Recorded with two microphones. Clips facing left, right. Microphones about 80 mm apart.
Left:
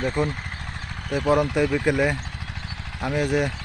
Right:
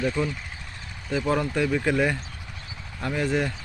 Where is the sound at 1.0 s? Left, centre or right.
Left.